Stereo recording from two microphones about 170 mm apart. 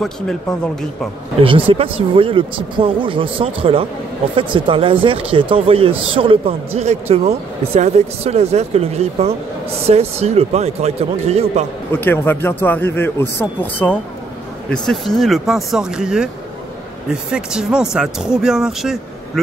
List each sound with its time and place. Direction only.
0.0 s speech: 5° left (ahead or behind)
1.4 s speech: 35° right (ahead or behind)
11.9 s speech: 10° left (ahead or behind)